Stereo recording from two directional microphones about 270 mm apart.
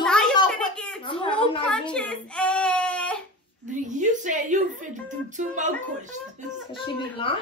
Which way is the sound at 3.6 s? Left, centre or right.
Right.